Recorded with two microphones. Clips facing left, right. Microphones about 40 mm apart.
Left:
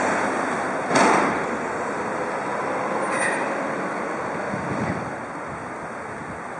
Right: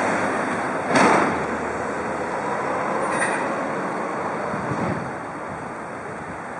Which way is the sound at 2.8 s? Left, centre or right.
Centre.